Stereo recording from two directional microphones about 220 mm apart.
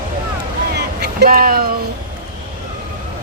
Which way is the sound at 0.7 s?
50° right (ahead or behind).